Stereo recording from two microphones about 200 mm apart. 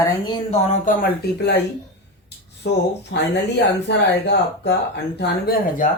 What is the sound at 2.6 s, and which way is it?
Speech, 55° left (ahead or behind).